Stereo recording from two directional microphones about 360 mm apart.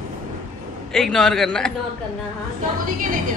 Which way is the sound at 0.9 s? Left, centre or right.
Centre.